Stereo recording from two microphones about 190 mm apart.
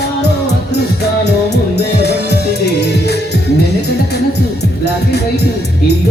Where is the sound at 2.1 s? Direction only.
60° left (ahead or behind).